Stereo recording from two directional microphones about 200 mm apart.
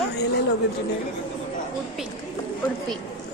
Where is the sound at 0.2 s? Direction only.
55° left (ahead or behind).